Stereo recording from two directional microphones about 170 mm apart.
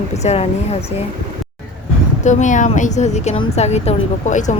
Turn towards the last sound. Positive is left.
turn(degrees=45)  # may be behind; listen again after turning